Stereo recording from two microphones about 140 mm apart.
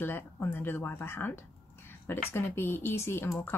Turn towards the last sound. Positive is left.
turn(degrees=15)  # may be behind; listen again after turning